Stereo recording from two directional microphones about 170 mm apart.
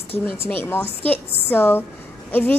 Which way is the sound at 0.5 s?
10° left (ahead or behind).